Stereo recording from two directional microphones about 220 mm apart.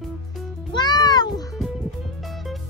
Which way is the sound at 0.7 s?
20° left (ahead or behind).